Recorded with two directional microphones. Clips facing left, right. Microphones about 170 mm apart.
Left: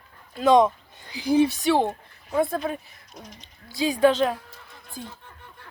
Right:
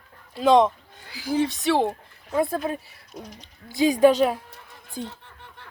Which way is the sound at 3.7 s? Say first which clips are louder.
Right 3 dB; 15° right (ahead or behind).